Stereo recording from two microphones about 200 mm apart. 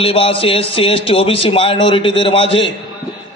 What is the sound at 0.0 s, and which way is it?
A man's voice, 30° left (ahead or behind).